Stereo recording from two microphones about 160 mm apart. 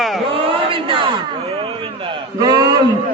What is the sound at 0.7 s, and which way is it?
Crowd, 35° right (ahead or behind).